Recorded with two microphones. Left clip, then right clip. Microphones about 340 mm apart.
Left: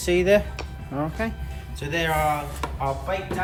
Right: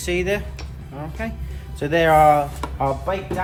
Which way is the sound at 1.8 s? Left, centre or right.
Centre.